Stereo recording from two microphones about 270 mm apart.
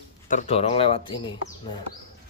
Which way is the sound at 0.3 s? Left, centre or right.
Left.